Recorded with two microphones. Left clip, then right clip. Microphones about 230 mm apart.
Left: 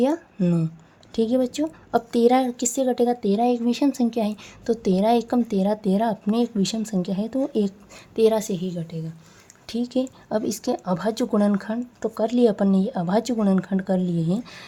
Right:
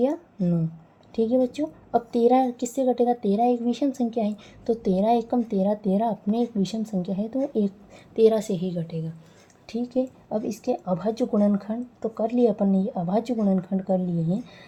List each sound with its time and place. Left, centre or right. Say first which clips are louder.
0.0 s a woman's voice: left 2 dB; left; by 9.1 s centre
9.6 s a woman's voice: left 1 dB; left